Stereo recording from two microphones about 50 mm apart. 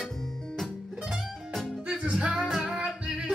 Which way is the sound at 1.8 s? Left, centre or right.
Centre.